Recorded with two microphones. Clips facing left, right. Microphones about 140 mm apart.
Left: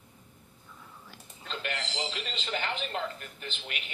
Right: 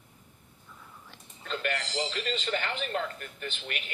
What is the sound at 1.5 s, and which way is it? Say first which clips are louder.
Speech: right 4 dB; 50° right (ahead or behind).